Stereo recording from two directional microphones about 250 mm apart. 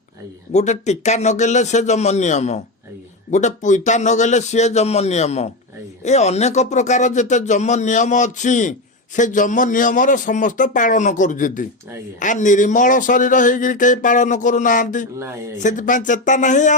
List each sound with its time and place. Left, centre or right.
0.5 s a man's voice: left